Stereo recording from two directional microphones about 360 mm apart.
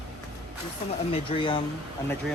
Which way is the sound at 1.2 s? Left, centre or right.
Centre.